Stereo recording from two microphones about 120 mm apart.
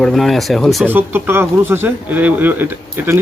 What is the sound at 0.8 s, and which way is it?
Speech, 15° right (ahead or behind).